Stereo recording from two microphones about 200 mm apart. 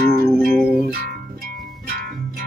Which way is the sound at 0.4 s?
Centre (ahead or behind).